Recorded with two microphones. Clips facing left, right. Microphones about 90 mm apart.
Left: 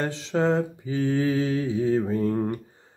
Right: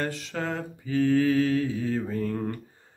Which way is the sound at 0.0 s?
25° left (ahead or behind).